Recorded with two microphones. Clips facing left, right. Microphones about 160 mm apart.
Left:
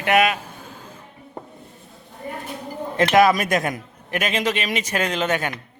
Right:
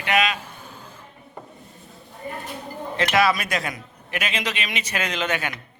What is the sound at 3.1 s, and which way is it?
A man's voice, 45° left (ahead or behind).